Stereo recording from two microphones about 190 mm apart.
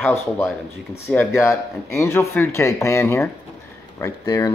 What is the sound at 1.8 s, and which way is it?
Speech, 15° left (ahead or behind).